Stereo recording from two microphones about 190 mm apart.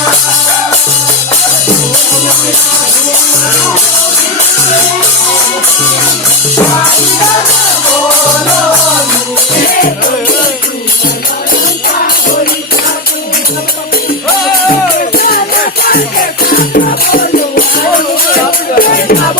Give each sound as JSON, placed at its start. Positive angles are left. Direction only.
{"t": 15.1, "sound": "music", "side_deg": 50}
{"t": 18.8, "sound": "music", "side_deg": 50}